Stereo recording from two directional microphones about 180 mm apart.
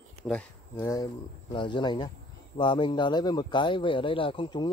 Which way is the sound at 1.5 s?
25° left (ahead or behind).